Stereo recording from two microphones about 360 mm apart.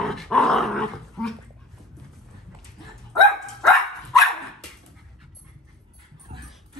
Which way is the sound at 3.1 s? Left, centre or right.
Centre.